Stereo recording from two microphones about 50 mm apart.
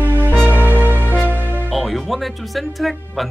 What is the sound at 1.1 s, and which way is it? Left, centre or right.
Music, left.